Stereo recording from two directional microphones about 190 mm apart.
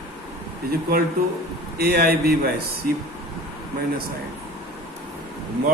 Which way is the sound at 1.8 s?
55° right (ahead or behind).